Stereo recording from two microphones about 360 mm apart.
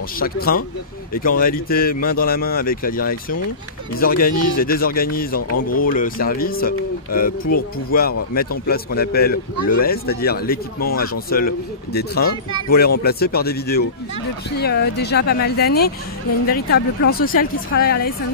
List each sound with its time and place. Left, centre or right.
0.2 s speech: left